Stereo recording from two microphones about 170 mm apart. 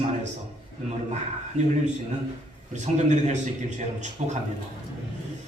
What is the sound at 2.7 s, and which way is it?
A man's voice, 45° right (ahead or behind).